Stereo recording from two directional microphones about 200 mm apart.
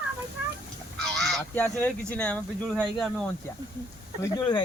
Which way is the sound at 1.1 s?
Centre (ahead or behind).